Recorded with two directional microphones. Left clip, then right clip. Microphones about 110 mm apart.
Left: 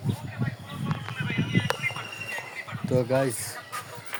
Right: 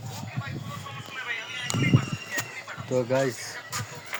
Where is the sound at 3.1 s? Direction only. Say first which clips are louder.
Even; 20° left (ahead or behind).